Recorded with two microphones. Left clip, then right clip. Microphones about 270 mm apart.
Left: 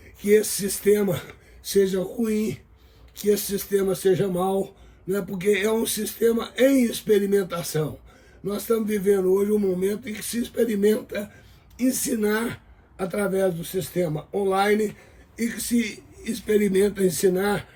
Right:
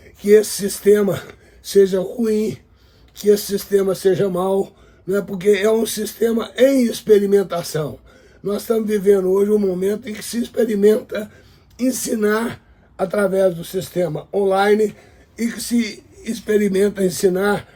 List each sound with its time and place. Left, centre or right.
0.2 s speech: centre